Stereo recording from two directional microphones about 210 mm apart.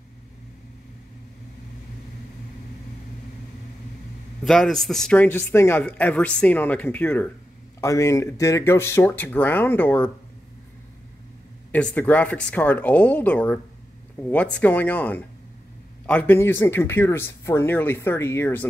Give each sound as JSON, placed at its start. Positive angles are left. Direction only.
{"t": 4.5, "sound": "speech", "side_deg": 0}
{"t": 11.7, "sound": "speech", "side_deg": 5}